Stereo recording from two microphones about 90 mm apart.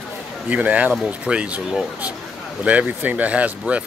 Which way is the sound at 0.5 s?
15° right (ahead or behind).